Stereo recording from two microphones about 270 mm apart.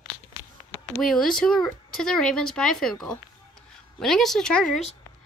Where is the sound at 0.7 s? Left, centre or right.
Centre.